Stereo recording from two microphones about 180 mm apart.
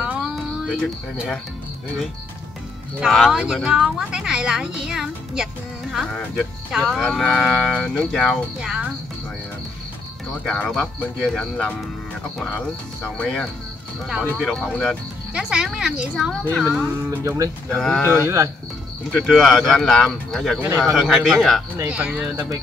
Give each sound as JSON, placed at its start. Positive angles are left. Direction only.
{"t": 0.0, "sound": "a sound", "side_deg": -5}
{"t": 3.0, "sound": "speech", "side_deg": 0}
{"t": 10.4, "sound": "speech", "side_deg": 5}
{"t": 13.0, "sound": "speech", "side_deg": 5}
{"t": 16.4, "sound": "speech", "side_deg": 10}
{"t": 17.2, "sound": "speech", "side_deg": -15}
{"t": 17.7, "sound": "speech", "side_deg": 5}
{"t": 19.1, "sound": "speech", "side_deg": 0}